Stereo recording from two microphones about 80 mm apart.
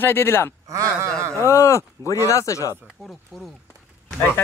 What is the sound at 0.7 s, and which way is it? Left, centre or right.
Speech, right.